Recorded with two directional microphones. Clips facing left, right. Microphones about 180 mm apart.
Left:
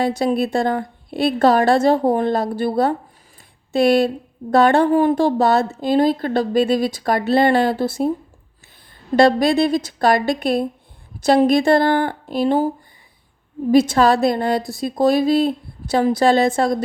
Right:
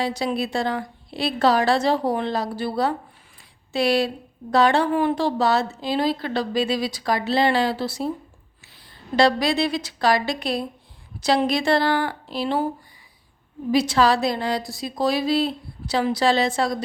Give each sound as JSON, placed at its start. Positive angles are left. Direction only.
{"t": 0.0, "sound": "a woman's voice", "side_deg": 50}
{"t": 9.1, "sound": "a woman's voice", "side_deg": 50}
{"t": 13.7, "sound": "a woman's voice", "side_deg": 50}